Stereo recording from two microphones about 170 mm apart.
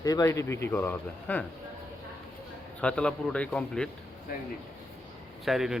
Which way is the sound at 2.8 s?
5° left (ahead or behind).